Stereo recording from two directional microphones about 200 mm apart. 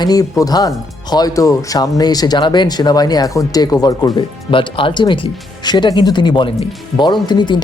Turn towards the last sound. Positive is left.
turn(degrees=20)  # may be behind; listen again after turning